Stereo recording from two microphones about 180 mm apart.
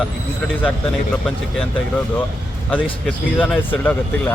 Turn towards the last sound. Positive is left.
turn(degrees=10)  # may be behind; listen again after turning